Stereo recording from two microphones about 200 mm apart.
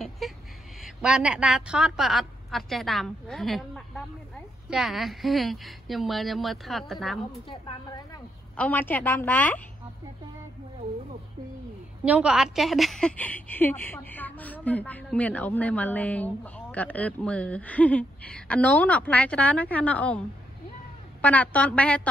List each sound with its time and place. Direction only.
0.2 s a sound: centre (ahead or behind)
0.8 s a woman's voice: 5° right (ahead or behind)
7.4 s a woman's voice: 25° left (ahead or behind)
8.5 s a woman's voice: 10° left (ahead or behind)
12.0 s a woman's voice: 5° right (ahead or behind)